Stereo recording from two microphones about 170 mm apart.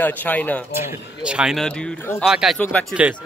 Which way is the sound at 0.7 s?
10° right (ahead or behind).